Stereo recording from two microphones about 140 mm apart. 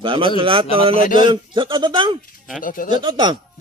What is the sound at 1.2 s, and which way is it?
Speech, 35° right (ahead or behind).